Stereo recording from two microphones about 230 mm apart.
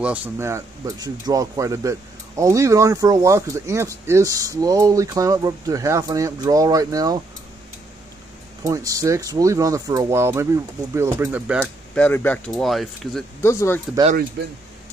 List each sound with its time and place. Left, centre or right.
0.0 s speech: centre
8.6 s speech: centre
11.9 s speech: centre
13.4 s speech: centre
14.4 s speech: right